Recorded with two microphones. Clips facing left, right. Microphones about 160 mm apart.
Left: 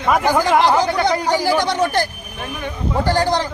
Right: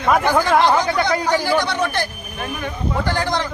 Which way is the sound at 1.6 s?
40° left (ahead or behind).